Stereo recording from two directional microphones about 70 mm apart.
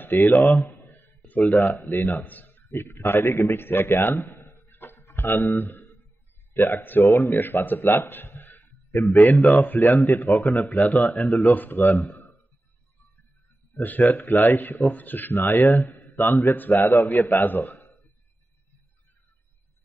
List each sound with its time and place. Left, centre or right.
0.2 s speech: left
0.6 s a man's voice: left
10.6 s speech: centre
11.1 s a man's voice: left
13.7 s a man's voice: left